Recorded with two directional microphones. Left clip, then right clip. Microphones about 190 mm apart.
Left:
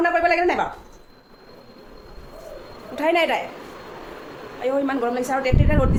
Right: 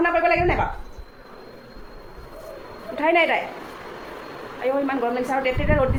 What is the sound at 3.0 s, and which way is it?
Speech, 15° left (ahead or behind).